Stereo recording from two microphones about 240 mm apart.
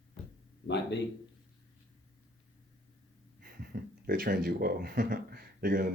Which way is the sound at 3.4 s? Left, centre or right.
Right.